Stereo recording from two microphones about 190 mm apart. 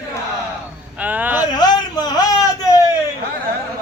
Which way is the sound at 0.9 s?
10° right (ahead or behind).